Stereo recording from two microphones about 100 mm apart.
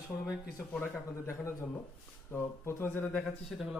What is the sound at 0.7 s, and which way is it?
Speech, 20° left (ahead or behind).